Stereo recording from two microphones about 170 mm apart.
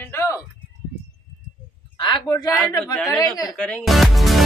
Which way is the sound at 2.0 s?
30° left (ahead or behind).